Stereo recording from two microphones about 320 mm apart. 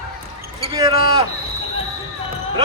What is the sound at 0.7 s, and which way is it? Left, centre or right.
Speech, centre.